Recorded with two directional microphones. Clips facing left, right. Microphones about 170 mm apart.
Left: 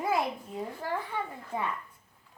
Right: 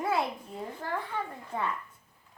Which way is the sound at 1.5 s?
15° left (ahead or behind).